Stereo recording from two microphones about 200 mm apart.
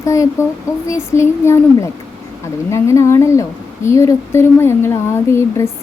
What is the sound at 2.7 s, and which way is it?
Speech, 15° left (ahead or behind).